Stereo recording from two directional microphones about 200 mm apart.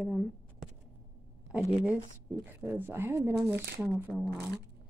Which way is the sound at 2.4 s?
10° right (ahead or behind).